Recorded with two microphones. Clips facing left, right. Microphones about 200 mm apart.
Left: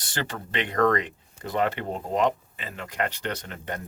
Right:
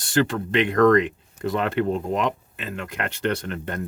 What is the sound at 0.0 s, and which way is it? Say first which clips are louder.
Speech: right 11 dB; 55° right (ahead or behind).